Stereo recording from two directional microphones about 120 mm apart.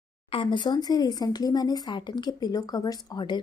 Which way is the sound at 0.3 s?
45° left (ahead or behind).